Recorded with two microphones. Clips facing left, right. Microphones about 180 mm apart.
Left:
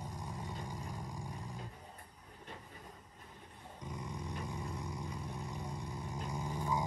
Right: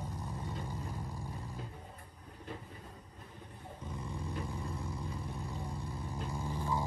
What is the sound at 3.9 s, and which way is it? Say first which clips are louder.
Vehicle: right 1 dB; 15° left (ahead or behind).